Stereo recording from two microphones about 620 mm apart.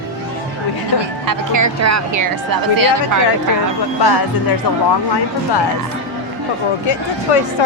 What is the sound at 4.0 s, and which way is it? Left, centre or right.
Speech, left.